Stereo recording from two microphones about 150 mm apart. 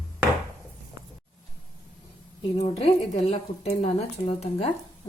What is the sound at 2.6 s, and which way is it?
A woman's voice, 40° left (ahead or behind).